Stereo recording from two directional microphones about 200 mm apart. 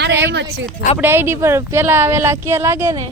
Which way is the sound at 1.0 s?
10° right (ahead or behind).